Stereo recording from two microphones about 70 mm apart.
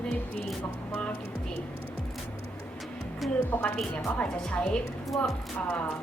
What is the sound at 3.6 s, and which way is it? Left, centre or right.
A woman's voice, centre.